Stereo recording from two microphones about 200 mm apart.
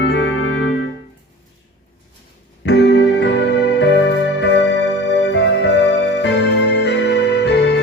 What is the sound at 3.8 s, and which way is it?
Music, 60° left (ahead or behind).